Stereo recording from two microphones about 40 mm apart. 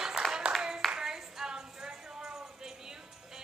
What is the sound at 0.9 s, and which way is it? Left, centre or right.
Clapping, centre.